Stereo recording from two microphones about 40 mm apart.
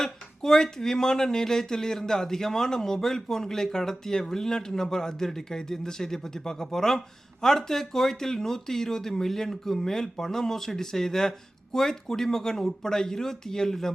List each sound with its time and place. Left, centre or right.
0.0 s speech: centre